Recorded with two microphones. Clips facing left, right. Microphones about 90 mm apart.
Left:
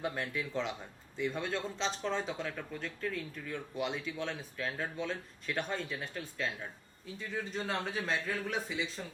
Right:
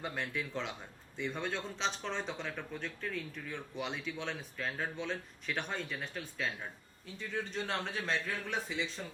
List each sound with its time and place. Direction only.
0.1 s a man's voice: centre (ahead or behind)